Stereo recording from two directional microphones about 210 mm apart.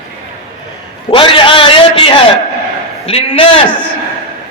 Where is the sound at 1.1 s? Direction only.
25° left (ahead or behind).